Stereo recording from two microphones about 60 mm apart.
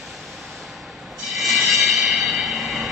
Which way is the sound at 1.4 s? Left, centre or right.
Centre.